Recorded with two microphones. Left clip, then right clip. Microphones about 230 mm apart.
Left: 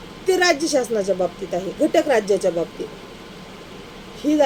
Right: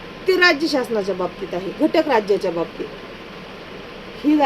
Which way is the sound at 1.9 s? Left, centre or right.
Centre.